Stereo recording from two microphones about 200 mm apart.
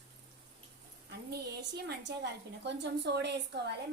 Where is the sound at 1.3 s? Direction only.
55° right (ahead or behind).